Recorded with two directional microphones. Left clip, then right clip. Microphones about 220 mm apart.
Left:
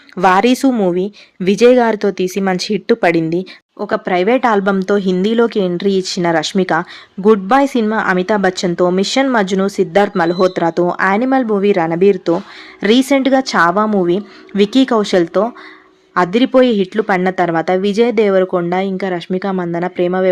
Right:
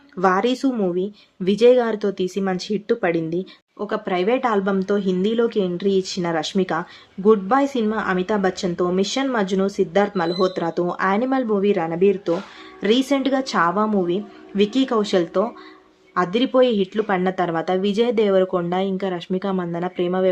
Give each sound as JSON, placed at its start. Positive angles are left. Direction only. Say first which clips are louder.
{"t": 0.2, "sound": "speech", "louder": "left 8 dB", "side_deg": 35}